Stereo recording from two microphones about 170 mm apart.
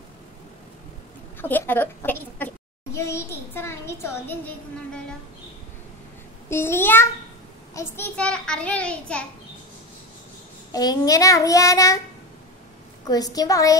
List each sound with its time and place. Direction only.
1.4 s a child's voice: 10° left (ahead or behind)
6.5 s a child's voice: 15° left (ahead or behind)
10.7 s child singing: 20° left (ahead or behind)
13.0 s child singing: 20° left (ahead or behind)